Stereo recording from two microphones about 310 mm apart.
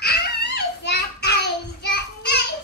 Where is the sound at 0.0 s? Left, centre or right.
Left.